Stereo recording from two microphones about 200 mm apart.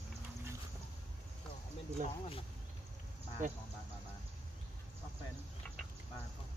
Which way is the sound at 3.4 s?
40° right (ahead or behind).